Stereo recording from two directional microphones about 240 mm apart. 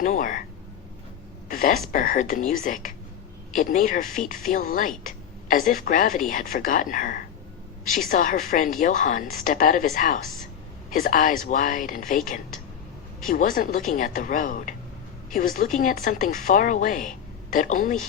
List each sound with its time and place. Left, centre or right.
0.0 s speech: left
1.5 s a sound: left
1.9 s speech: left